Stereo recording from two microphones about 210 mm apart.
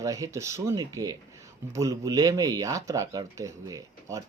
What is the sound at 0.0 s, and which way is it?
Speech, 15° right (ahead or behind).